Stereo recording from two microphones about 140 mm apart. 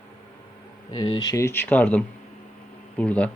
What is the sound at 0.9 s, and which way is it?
Speech, 30° left (ahead or behind).